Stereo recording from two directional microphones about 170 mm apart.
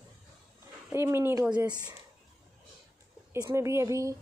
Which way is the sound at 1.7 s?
25° right (ahead or behind).